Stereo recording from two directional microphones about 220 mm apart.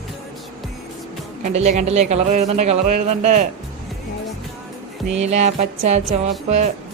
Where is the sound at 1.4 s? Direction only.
30° right (ahead or behind).